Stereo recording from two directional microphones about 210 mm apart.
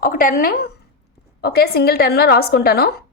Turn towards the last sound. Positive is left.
turn(degrees=50)  # may be behind; listen again after turning